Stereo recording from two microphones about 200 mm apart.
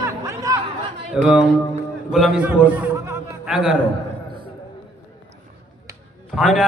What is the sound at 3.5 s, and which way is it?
Speech, 5° right (ahead or behind).